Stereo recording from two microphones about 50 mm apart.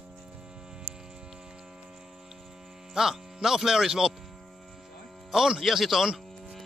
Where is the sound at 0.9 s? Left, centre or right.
Left.